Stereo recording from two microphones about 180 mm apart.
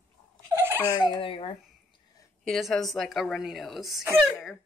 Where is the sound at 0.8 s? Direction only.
25° left (ahead or behind).